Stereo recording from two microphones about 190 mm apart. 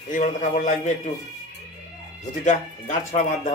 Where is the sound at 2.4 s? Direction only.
40° left (ahead or behind).